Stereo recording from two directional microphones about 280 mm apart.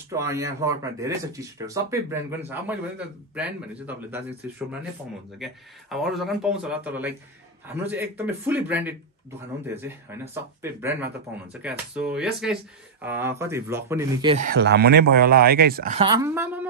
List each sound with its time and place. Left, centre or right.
0.1 s speech: centre; by 16.1 s right
16.1 s speech: centre